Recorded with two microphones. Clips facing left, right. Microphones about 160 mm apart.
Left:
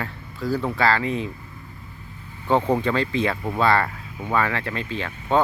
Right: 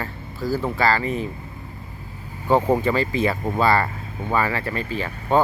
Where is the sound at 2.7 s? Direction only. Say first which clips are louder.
Right 2 dB; 5° right (ahead or behind).